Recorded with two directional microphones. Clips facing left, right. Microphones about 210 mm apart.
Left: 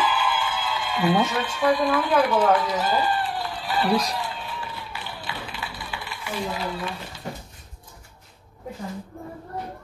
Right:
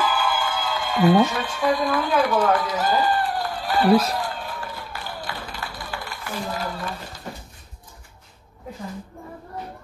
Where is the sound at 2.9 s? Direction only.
45° right (ahead or behind).